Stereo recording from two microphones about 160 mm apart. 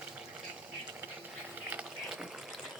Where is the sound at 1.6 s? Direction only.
10° right (ahead or behind).